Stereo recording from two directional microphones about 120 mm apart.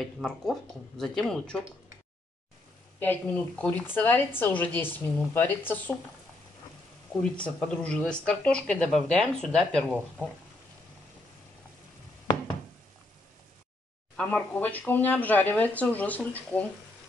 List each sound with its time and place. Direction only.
0.0 s speech: 5° left (ahead or behind)
3.0 s speech: 10° left (ahead or behind)
7.2 s speech: 10° left (ahead or behind)
14.1 s speech: 10° left (ahead or behind)